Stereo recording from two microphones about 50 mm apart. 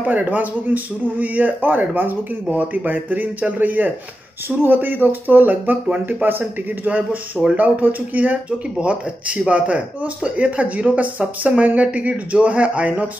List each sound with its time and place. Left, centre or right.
0.0 s a man's voice: right
8.7 s speech: right